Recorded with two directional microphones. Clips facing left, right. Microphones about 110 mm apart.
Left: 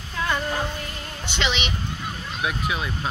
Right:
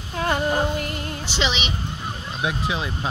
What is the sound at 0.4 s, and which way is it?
Music, 25° right (ahead or behind).